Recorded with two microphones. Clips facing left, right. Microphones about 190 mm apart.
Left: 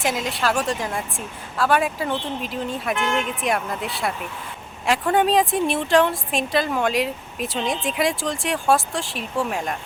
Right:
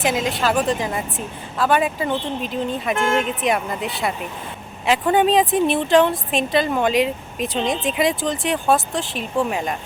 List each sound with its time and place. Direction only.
0.0 s a woman's voice: centre (ahead or behind)
2.9 s speech: 45° right (ahead or behind)
3.4 s a woman's voice: centre (ahead or behind)
4.9 s a woman's voice: centre (ahead or behind)